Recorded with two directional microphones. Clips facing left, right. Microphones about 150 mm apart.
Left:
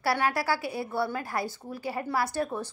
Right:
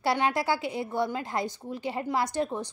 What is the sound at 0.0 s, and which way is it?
A woman's voice, 20° right (ahead or behind).